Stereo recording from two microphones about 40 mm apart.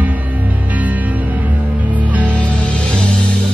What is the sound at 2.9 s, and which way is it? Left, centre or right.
Music, left.